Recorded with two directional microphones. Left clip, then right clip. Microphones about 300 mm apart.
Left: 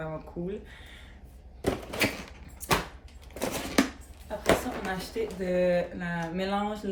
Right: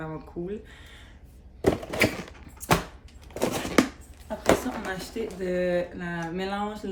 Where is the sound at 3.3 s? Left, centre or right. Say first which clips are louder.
Right 4 dB; right.